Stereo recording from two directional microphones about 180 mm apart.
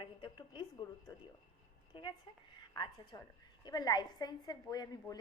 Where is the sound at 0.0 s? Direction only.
25° left (ahead or behind).